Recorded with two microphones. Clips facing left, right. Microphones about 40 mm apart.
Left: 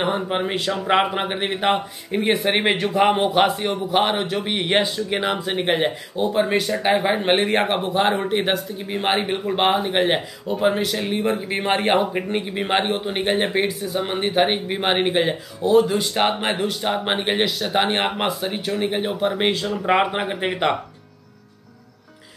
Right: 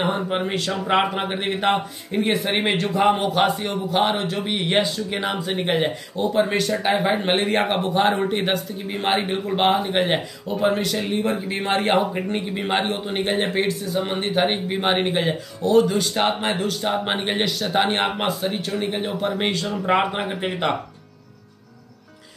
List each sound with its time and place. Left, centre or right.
0.3 s a man's voice: centre
2.9 s a man's voice: left
4.5 s a man's voice: centre
5.6 s a man's voice: centre